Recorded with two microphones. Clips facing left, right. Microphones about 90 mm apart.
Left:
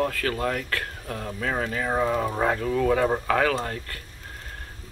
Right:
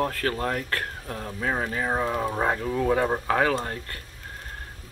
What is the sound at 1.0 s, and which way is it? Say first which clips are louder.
Speech: even; 25° right (ahead or behind).